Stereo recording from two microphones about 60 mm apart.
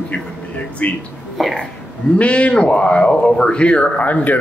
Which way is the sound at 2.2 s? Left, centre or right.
Left.